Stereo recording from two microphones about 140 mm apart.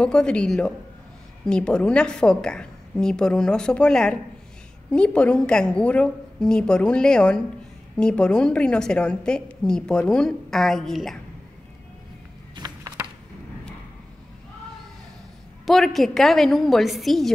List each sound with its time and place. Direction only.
0.0 s a woman's voice: 5° left (ahead or behind)
12.5 s a sound: 30° right (ahead or behind)
15.6 s a woman's voice: centre (ahead or behind)